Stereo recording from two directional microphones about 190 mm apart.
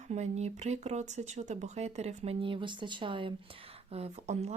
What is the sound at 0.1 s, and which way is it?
Speech, 35° right (ahead or behind).